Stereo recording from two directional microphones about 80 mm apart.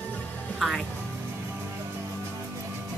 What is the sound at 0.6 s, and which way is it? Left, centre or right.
Speech, centre.